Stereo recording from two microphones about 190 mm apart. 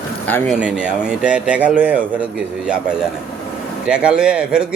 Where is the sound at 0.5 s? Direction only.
5° right (ahead or behind).